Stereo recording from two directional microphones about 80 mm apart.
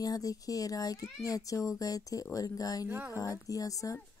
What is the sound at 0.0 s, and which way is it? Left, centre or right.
Speech, left.